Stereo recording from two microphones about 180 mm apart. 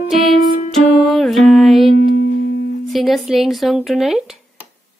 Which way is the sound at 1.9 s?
55° left (ahead or behind).